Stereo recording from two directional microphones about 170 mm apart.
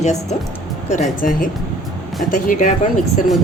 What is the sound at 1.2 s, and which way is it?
A woman's voice, 50° left (ahead or behind).